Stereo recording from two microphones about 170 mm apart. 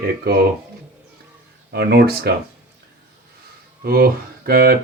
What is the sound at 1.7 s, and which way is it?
Speech, 70° right (ahead or behind).